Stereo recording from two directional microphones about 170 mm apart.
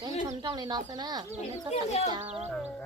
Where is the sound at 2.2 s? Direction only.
40° right (ahead or behind).